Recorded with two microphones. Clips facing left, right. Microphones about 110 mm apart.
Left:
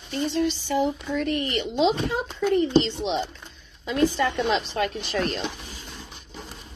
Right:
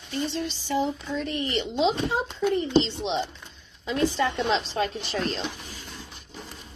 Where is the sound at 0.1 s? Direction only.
40° left (ahead or behind).